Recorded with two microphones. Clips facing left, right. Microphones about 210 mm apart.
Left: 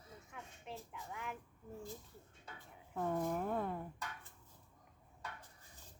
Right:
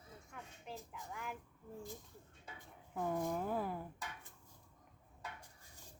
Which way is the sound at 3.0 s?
Centre (ahead or behind).